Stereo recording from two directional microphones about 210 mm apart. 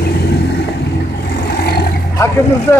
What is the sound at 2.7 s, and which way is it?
Speech, 15° left (ahead or behind).